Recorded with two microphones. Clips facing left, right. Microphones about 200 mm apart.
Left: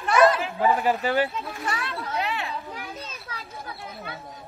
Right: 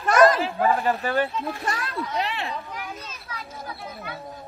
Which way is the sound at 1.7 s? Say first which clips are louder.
Right 2 dB; 40° right (ahead or behind).